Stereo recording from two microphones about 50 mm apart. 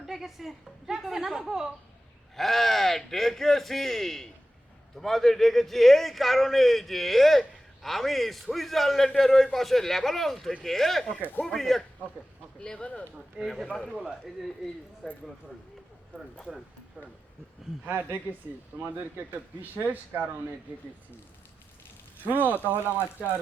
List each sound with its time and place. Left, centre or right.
0.0 s a man's voice: centre
2.3 s a man's voice: centre
12.5 s speech: centre
13.4 s a man's voice: centre
17.8 s speech: right
22.2 s speech: right